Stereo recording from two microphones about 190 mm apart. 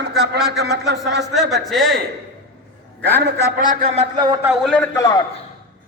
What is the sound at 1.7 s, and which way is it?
Speech, centre (ahead or behind).